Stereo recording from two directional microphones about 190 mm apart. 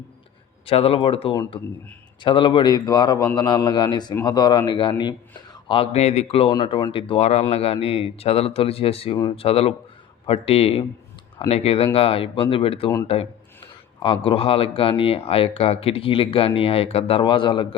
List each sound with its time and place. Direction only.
0.6 s speech: 30° left (ahead or behind)